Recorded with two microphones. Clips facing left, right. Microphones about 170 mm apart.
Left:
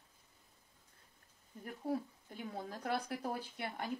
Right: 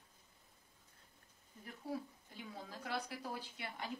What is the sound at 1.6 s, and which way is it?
A woman's voice, 50° left (ahead or behind).